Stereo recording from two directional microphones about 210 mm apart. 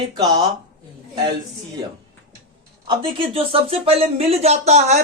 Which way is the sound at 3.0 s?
25° right (ahead or behind).